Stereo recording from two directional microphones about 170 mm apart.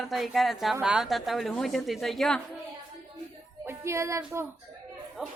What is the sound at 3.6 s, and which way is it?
Speech, 15° right (ahead or behind).